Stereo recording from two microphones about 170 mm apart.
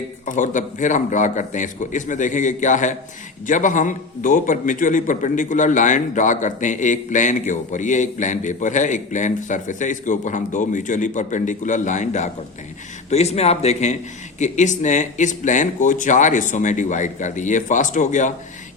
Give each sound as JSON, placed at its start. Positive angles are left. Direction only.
{"t": 0.3, "sound": "a man's voice", "side_deg": 50}